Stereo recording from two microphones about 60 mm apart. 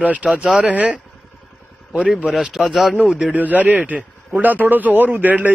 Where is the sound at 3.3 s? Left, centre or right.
Right.